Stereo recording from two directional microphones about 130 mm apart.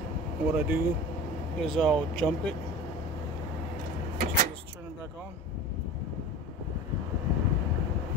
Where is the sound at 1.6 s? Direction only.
5° left (ahead or behind).